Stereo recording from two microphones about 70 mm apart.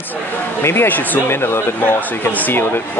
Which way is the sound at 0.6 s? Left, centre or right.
Left.